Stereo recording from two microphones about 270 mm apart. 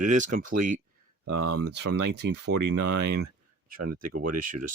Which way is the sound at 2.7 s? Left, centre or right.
Right.